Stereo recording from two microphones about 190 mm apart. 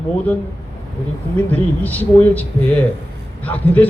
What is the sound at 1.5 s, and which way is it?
A man's voice, 10° left (ahead or behind).